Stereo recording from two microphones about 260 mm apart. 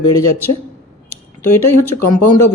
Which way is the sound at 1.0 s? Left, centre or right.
Centre.